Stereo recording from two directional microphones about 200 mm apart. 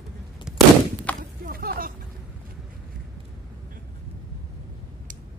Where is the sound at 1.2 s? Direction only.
45° right (ahead or behind).